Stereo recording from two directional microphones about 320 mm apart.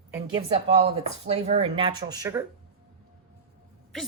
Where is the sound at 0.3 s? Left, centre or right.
Centre.